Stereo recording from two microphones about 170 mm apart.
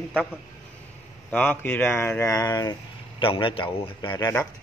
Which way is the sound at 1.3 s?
10° left (ahead or behind).